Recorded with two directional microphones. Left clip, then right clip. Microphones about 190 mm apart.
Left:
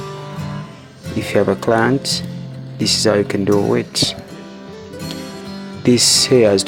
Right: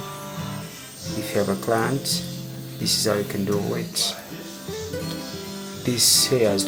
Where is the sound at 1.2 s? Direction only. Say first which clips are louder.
Left 8 dB; 45° left (ahead or behind).